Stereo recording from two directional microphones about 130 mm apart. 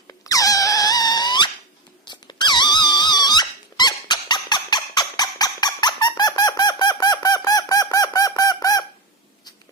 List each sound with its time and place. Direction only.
0.1 s squeak: 25° left (ahead or behind)